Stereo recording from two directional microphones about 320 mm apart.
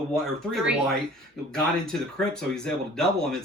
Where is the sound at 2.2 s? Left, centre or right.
Centre.